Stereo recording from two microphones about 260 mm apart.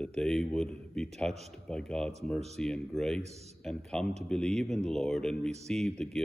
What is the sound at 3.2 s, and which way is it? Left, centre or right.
Speech, right.